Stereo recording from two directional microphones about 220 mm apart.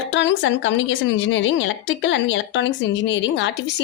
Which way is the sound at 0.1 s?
55° left (ahead or behind).